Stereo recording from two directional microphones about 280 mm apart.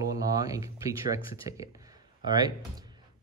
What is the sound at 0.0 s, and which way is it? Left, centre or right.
Speech, centre.